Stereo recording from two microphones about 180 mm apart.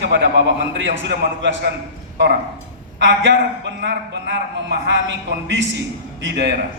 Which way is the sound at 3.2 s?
70° right (ahead or behind).